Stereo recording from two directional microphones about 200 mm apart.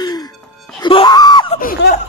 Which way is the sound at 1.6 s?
45° left (ahead or behind).